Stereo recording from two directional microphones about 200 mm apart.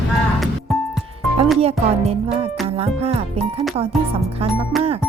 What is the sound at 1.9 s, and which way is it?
Speech, 30° right (ahead or behind).